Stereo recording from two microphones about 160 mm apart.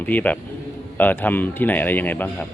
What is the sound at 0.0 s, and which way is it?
Speech, 10° left (ahead or behind).